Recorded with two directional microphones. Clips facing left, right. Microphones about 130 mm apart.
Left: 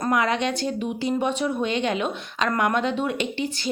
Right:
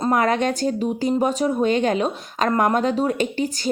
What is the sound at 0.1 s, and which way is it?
Speech, 45° right (ahead or behind).